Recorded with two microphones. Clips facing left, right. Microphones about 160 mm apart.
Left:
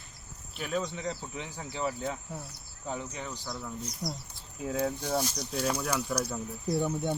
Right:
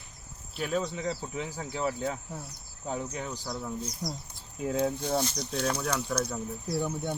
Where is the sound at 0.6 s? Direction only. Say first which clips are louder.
Right 2 dB; centre (ahead or behind).